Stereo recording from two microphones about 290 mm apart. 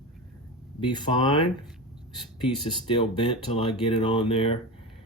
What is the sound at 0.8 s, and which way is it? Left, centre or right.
Speech, centre.